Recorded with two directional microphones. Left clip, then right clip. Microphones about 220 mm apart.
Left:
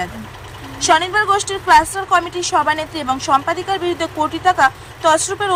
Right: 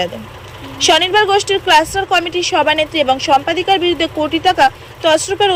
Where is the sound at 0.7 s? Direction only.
5° right (ahead or behind).